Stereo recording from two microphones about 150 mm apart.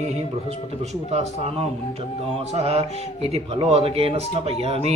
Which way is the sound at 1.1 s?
45° right (ahead or behind).